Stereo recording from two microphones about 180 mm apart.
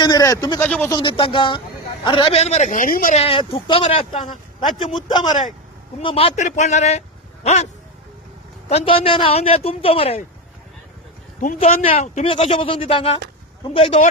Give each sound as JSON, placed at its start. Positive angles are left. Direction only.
{"t": 0.0, "sound": "speech", "side_deg": 20}
{"t": 0.6, "sound": "speech", "side_deg": 10}
{"t": 0.9, "sound": "speech", "side_deg": 25}
{"t": 3.2, "sound": "speech", "side_deg": 30}
{"t": 8.7, "sound": "speech", "side_deg": 30}
{"t": 11.3, "sound": "speech", "side_deg": 45}